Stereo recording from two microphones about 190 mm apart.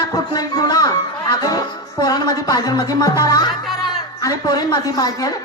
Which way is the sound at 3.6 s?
Centre (ahead or behind).